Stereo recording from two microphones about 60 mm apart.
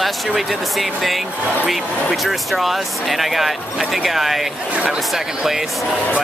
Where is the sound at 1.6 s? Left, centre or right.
Centre.